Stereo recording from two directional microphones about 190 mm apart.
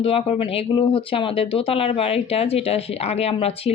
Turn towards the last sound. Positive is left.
turn(degrees=30)  # may be behind; listen again after turning